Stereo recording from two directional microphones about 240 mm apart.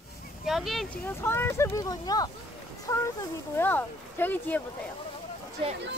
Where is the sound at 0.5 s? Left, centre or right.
Centre.